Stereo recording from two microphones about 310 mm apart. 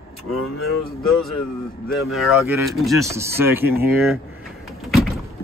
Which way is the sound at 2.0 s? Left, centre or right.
Centre.